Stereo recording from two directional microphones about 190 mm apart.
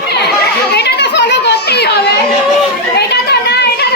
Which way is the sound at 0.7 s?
60° left (ahead or behind).